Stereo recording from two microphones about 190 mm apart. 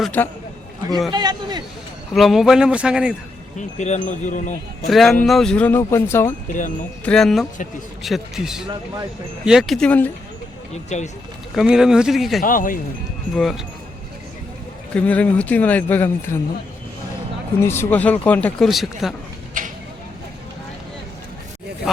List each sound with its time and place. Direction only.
0.0 s speech: 10° left (ahead or behind)
1.1 s speech: 20° right (ahead or behind)
2.1 s a man's voice: centre (ahead or behind)
3.8 s wind chime: 40° left (ahead or behind)
4.9 s a man's voice: centre (ahead or behind)
6.5 s speech: 40° left (ahead or behind)
7.0 s a man's voice: 5° left (ahead or behind)
10.8 s wind chime: 35° left (ahead or behind)
11.5 s a man's voice: 5° right (ahead or behind)
12.4 s speech: 45° left (ahead or behind)
13.3 s a man's voice: centre (ahead or behind)
14.9 s speech: 5° left (ahead or behind)
17.6 s speech: 15° left (ahead or behind)